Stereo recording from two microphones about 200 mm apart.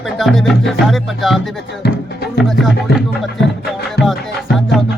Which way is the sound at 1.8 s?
55° left (ahead or behind).